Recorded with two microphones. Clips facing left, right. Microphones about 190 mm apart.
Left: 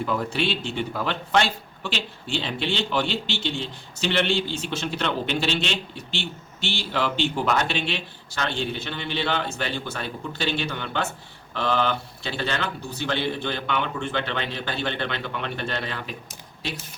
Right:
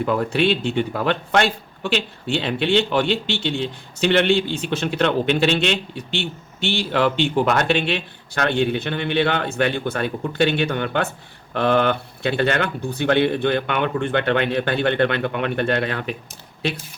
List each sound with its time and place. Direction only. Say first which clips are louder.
0.0 s speech: right 6 dB; 60° right (ahead or behind)